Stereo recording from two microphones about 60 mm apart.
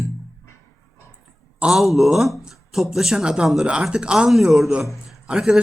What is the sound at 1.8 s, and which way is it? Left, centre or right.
A man's voice, centre.